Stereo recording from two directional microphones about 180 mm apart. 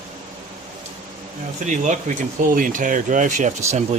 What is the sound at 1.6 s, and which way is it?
Speech, 45° right (ahead or behind).